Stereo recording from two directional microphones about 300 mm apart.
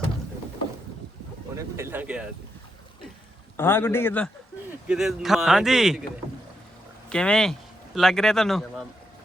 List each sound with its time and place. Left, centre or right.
1.5 s a sound: centre
3.6 s a man's voice: centre
7.1 s speech: centre